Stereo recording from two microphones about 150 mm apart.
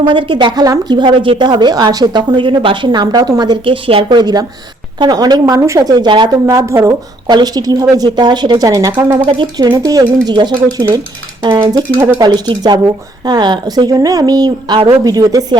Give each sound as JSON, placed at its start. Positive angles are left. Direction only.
{"t": 0.0, "sound": "a woman's voice", "side_deg": -35}